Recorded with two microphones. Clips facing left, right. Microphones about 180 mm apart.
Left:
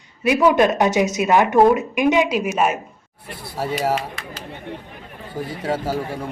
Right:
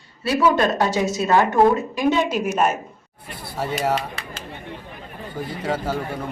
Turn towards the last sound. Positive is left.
turn(degrees=10)  # may be behind; listen again after turning